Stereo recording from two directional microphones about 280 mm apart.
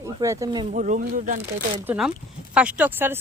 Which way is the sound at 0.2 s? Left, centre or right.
Centre.